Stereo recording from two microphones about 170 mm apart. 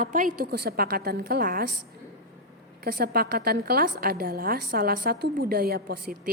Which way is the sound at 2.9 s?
65° right (ahead or behind).